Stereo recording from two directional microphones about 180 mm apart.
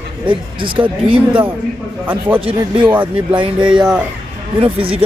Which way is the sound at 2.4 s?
30° right (ahead or behind).